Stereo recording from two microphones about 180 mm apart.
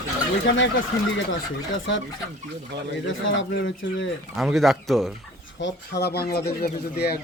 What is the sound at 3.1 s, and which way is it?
Speech, 90° left.